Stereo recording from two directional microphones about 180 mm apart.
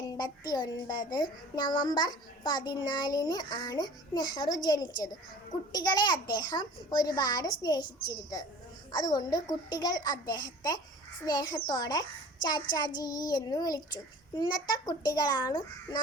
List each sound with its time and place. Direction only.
0.2 s a child's voice: 20° left (ahead or behind)